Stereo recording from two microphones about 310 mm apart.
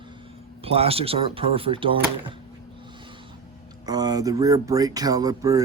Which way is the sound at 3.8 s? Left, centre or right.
Centre.